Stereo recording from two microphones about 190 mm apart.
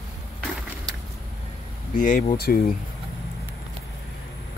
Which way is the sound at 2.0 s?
45° left (ahead or behind).